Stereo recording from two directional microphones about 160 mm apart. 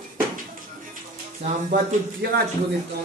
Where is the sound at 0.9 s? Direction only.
55° right (ahead or behind).